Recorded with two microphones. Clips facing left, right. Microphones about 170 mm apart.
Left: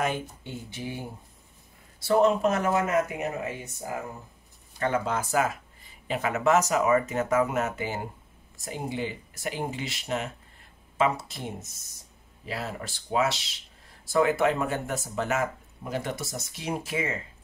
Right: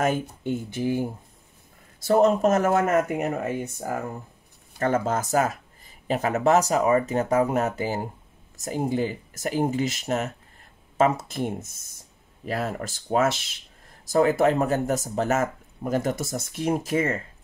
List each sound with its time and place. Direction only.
0.0 s speech: 45° right (ahead or behind)
14.0 s speech: 40° right (ahead or behind)